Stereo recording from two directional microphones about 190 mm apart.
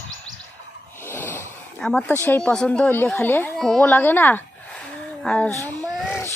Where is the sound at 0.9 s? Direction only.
10° left (ahead or behind).